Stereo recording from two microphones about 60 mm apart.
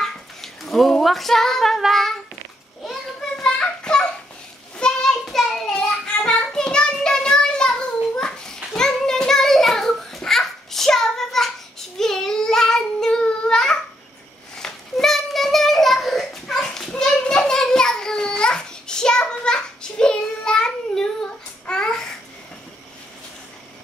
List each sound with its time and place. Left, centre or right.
0.0 s a sound: centre
1.8 s child singing: centre
2.8 s a sound: centre
3.5 s children playing: centre
4.8 s child singing: centre
5.2 s child singing: centre
5.9 s child singing: centre
8.2 s children playing: centre
8.7 s child singing: centre
21.6 s babbling: centre